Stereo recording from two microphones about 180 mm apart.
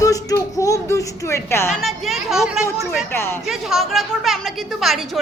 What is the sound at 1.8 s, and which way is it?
Speech, centre (ahead or behind).